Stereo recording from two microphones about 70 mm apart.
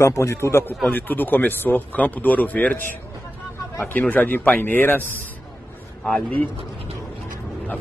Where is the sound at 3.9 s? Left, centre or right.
Left.